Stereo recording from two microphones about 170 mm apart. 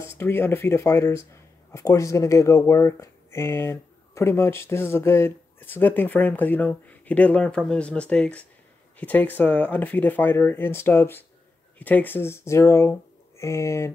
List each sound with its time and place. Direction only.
0.2 s speech: 15° left (ahead or behind)